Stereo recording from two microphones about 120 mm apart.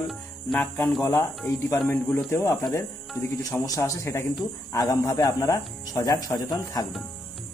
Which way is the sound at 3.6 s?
30° left (ahead or behind).